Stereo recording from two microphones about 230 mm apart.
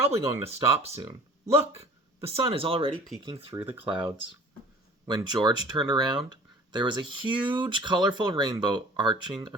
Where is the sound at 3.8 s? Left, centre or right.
Right.